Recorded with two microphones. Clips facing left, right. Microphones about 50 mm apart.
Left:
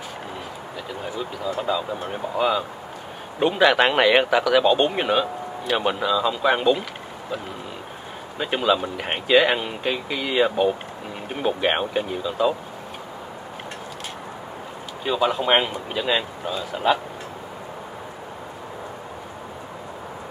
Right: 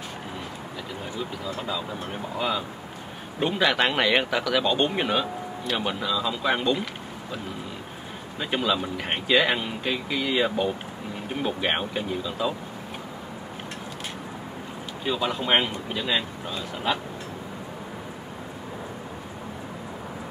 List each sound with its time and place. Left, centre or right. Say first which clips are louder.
1.1 s speech: left 5 dB; centre
8.4 s speech: left 4 dB; centre
15.0 s speech: left 5 dB; centre